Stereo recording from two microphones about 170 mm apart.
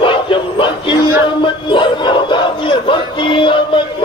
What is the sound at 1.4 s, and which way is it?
Battle cry, 30° left (ahead or behind).